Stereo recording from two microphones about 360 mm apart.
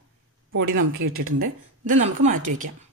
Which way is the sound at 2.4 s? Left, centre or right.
Right.